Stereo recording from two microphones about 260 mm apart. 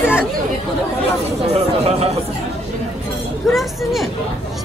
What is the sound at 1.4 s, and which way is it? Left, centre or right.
Speech, right.